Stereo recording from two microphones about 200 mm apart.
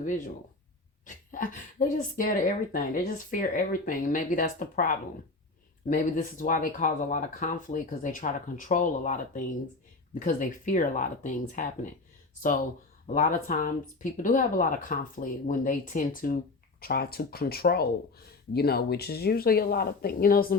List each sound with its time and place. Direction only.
1.0 s speech: 40° left (ahead or behind)
13.1 s speech: 45° left (ahead or behind)